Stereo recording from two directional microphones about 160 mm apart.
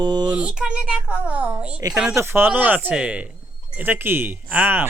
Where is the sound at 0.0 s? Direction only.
25° right (ahead or behind).